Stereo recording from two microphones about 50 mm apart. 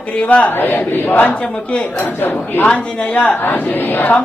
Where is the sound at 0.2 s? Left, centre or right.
Left.